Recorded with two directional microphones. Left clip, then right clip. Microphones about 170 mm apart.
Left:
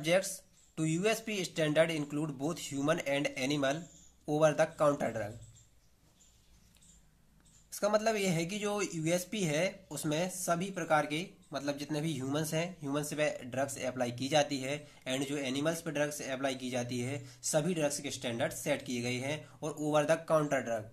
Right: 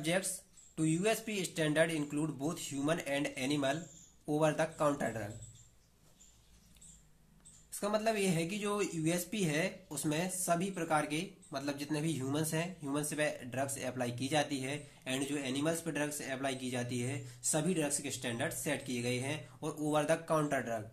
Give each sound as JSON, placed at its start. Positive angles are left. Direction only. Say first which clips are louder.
{"t": 0.0, "sound": "speech", "louder": "left 5 dB", "side_deg": 30}
{"t": 7.7, "sound": "speech", "louder": "left 3 dB", "side_deg": 35}